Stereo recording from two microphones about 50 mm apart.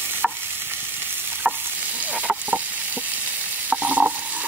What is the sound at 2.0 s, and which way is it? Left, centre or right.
Stir, right.